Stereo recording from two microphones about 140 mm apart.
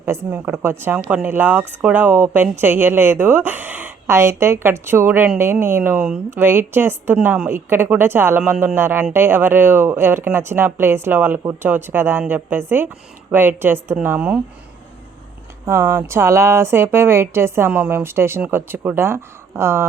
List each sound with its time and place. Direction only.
0.0 s a woman's voice: 15° right (ahead or behind)
15.6 s a woman's voice: 15° right (ahead or behind)